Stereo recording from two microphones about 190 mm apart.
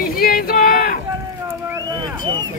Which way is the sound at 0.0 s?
50° left (ahead or behind).